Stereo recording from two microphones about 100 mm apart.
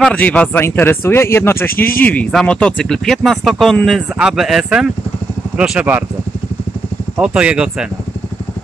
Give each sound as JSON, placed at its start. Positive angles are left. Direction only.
{"t": 0.0, "sound": "speech", "side_deg": 15}
{"t": 7.2, "sound": "speech", "side_deg": -10}